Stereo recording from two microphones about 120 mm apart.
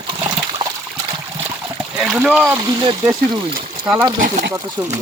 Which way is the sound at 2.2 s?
5° right (ahead or behind).